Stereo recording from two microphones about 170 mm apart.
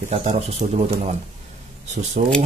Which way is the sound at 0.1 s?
40° right (ahead or behind).